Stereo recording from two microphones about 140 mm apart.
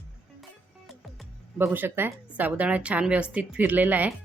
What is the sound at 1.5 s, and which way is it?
Speech, 15° right (ahead or behind).